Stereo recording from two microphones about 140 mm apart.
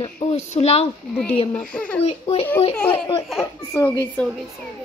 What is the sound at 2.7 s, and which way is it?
Speech, 10° left (ahead or behind).